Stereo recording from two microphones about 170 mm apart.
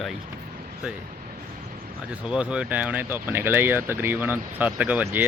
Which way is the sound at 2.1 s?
5° right (ahead or behind).